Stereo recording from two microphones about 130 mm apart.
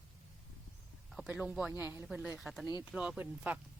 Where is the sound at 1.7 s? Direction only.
15° right (ahead or behind).